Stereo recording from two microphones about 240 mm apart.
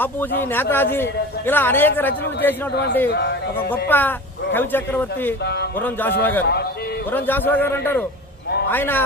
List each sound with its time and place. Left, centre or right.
0.0 s a man's voice: centre
2.7 s speech: left
3.7 s a man's voice: centre